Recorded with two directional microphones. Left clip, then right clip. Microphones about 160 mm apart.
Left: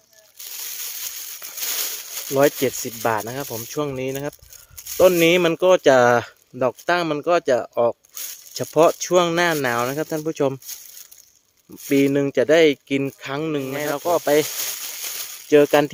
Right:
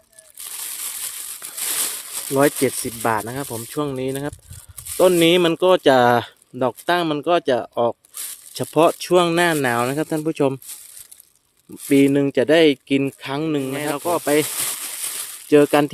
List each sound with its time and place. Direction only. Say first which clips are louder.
2.3 s speech: even; 25° right (ahead or behind)
11.9 s speech: right 2 dB; 30° right (ahead or behind)